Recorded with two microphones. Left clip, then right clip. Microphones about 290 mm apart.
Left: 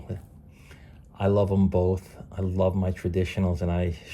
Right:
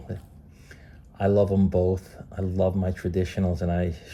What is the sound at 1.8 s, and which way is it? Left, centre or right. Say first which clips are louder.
Speech: right 1 dB; centre.